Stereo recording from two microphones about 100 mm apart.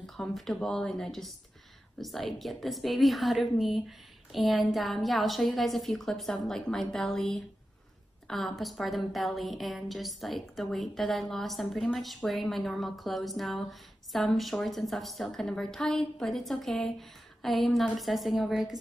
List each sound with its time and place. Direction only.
0.0 s speech: centre (ahead or behind)